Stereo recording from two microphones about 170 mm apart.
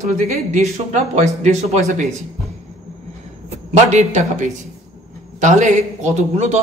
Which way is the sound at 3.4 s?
40° right (ahead or behind).